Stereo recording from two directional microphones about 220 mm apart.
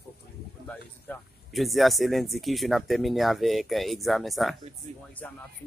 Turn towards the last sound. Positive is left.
turn(degrees=0)  # may be behind; listen again after turning